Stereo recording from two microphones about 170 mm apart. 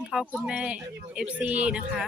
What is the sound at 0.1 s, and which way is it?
Speech, centre (ahead or behind).